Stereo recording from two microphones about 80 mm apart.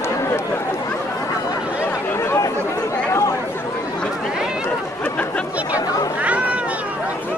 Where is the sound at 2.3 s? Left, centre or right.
Left.